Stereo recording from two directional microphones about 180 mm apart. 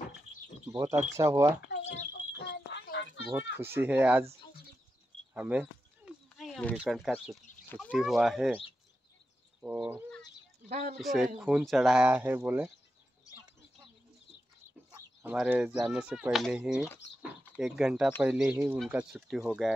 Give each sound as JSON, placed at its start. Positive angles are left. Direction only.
{"t": 0.7, "sound": "speech", "side_deg": -15}
{"t": 1.8, "sound": "a sound", "side_deg": 40}
{"t": 2.3, "sound": "a sound", "side_deg": 70}
{"t": 3.3, "sound": "speech", "side_deg": -10}
{"t": 5.3, "sound": "a sound", "side_deg": -10}
{"t": 6.8, "sound": "speech", "side_deg": 0}
{"t": 9.6, "sound": "cat", "side_deg": -5}
{"t": 10.7, "sound": "speech", "side_deg": -40}
{"t": 11.0, "sound": "speech", "side_deg": 0}
{"t": 14.9, "sound": "chicken", "side_deg": -20}
{"t": 15.3, "sound": "speech", "side_deg": -5}